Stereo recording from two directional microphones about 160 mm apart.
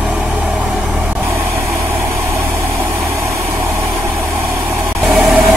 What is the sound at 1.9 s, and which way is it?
Vehicle, 15° right (ahead or behind).